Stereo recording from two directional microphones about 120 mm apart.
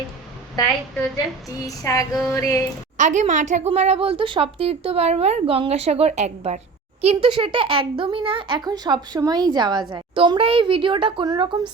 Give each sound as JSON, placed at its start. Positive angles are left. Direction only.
{"t": 0.6, "sound": "a woman's voice", "side_deg": 30}
{"t": 3.0, "sound": "a woman's voice", "side_deg": -85}
{"t": 3.7, "sound": "a woman's voice", "side_deg": -60}
{"t": 7.0, "sound": "speech", "side_deg": -50}